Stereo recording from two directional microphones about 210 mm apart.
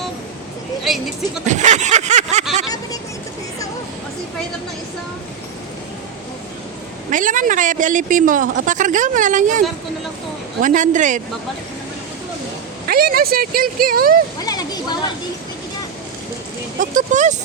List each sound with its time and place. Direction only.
1.5 s speech: 35° right (ahead or behind)
7.1 s speech: 40° right (ahead or behind)
12.9 s speech: 45° right (ahead or behind)
14.4 s speech: 20° left (ahead or behind)
16.8 s speech: 35° right (ahead or behind)